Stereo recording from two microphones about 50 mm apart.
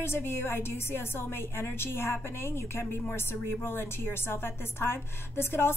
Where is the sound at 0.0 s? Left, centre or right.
Left.